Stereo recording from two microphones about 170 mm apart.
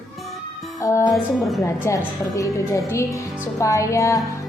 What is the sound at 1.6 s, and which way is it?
A child's voice, 20° left (ahead or behind).